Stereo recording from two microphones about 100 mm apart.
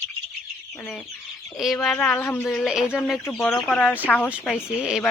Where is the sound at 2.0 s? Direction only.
20° left (ahead or behind).